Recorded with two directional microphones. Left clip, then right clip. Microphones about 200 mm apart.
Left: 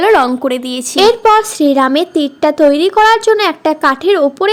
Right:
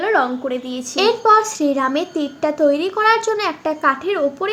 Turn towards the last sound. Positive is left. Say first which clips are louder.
# left 9 dB
turn(degrees=45)  # may be behind; listen again after turning